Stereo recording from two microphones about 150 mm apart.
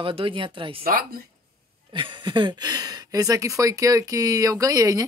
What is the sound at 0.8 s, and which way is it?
Speech, 80° right.